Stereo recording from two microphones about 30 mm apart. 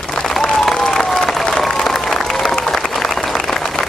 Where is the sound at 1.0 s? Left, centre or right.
Centre.